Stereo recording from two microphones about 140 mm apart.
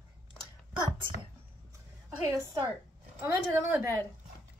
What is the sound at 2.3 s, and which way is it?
A woman's voice, 25° right (ahead or behind).